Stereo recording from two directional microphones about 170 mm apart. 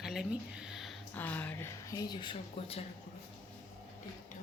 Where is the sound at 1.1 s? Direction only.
10° left (ahead or behind).